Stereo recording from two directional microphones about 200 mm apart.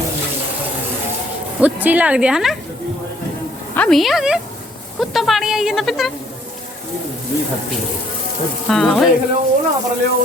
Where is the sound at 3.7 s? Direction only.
5° left (ahead or behind).